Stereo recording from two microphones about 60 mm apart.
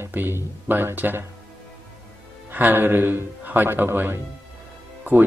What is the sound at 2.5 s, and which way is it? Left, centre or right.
Speech, right.